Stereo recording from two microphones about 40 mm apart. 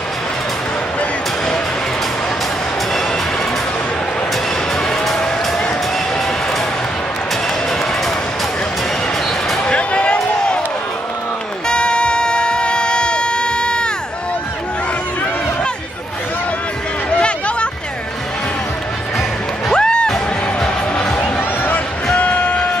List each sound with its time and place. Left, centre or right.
9.7 s a sound: left
11.6 s music: left
19.7 s music: left
21.2 s music: left